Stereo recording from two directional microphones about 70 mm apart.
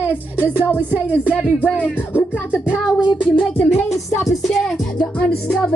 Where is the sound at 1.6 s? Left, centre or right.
Left.